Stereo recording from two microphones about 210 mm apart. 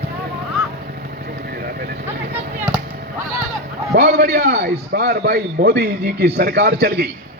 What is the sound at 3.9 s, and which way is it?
A man's voice, 50° right (ahead or behind).